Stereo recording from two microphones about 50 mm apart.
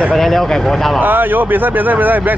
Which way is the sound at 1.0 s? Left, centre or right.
Right.